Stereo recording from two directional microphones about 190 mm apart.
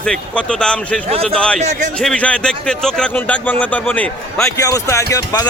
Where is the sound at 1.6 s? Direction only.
40° right (ahead or behind).